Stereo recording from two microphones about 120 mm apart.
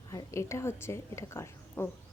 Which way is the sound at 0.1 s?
25° left (ahead or behind).